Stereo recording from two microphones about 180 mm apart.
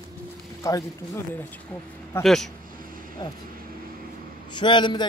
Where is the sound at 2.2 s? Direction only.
Centre (ahead or behind).